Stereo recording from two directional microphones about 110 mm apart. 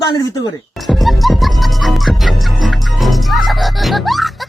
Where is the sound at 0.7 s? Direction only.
Centre (ahead or behind).